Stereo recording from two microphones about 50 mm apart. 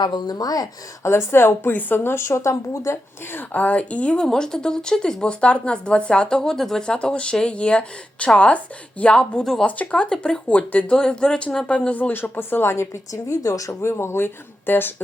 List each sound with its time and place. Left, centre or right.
1.0 s speech: left
1.7 s speech: left
2.1 s speech: left
3.3 s speech: left
4.3 s speech: centre
9.4 s speech: centre
9.6 s speech: left
10.0 s speech: centre
10.4 s speech: left
10.9 s speech: centre; by 12.3 s left
12.4 s speech: left
13.3 s speech: left